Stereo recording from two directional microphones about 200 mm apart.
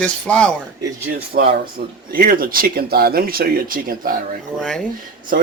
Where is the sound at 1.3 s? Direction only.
50° right (ahead or behind).